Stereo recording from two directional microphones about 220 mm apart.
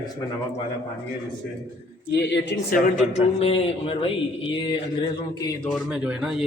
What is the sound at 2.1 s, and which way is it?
Speech, 50° left (ahead or behind).